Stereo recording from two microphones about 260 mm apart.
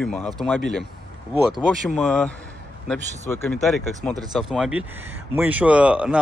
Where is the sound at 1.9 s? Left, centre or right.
Centre.